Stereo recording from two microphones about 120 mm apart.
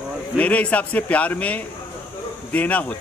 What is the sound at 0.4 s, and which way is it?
A man's voice, 10° left (ahead or behind).